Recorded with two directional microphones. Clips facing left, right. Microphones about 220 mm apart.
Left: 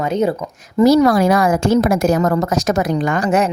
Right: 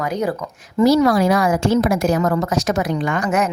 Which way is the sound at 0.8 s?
50° left (ahead or behind).